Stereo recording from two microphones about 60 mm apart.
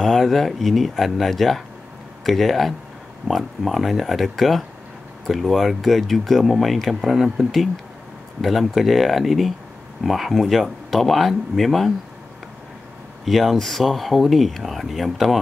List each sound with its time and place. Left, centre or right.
0.0 s speech: centre
13.2 s speech: centre